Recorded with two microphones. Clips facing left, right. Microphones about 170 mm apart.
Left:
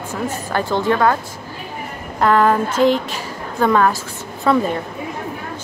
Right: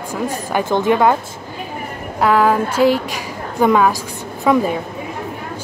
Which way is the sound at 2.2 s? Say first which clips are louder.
Even; 5° right (ahead or behind).